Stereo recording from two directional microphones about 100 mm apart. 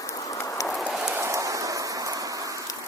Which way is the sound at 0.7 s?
5° right (ahead or behind).